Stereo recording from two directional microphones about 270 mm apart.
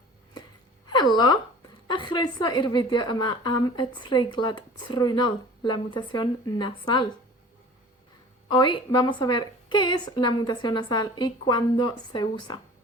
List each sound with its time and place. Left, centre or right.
0.9 s a woman's voice: centre
8.4 s a woman's voice: centre